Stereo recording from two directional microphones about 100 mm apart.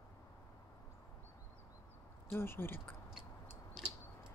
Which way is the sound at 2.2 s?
25° left (ahead or behind).